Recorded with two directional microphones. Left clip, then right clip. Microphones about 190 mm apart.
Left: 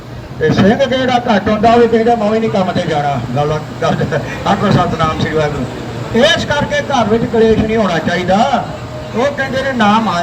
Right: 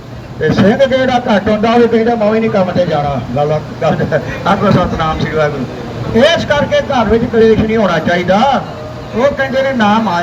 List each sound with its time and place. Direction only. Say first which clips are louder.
0.4 s a man's voice: right 1 dB; 20° right (ahead or behind)